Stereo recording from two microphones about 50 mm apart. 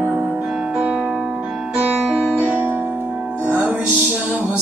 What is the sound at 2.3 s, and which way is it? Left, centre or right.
Music, right.